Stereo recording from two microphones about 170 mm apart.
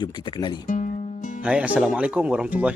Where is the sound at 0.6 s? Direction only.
50° left (ahead or behind).